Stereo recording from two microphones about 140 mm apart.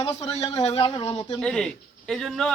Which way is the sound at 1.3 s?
5° left (ahead or behind).